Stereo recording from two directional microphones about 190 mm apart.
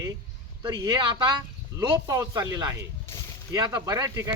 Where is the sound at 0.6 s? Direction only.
20° right (ahead or behind).